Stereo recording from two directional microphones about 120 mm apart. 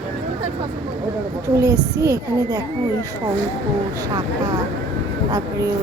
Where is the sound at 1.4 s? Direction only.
30° right (ahead or behind).